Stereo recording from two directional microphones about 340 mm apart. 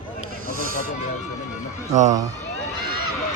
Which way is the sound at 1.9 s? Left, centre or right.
Right.